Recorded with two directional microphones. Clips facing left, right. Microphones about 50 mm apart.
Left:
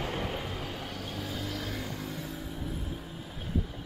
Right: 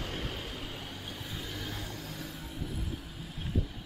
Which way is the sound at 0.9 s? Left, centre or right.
Left.